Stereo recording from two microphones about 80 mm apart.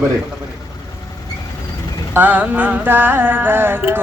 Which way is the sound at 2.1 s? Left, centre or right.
Right.